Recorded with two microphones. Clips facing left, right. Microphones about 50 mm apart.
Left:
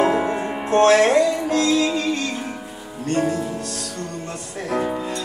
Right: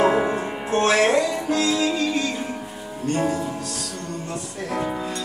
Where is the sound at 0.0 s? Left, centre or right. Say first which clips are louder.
Even; centre.